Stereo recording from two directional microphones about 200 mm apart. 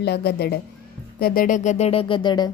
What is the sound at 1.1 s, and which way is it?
Speech, 45° left (ahead or behind).